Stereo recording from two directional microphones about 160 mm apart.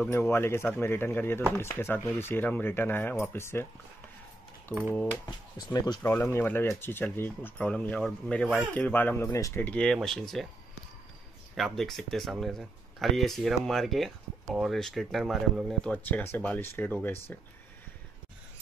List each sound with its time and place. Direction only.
0.3 s speech: 15° left (ahead or behind)
5.2 s speech: 25° left (ahead or behind)
6.3 s speech: 15° left (ahead or behind)
11.5 s speech: centre (ahead or behind)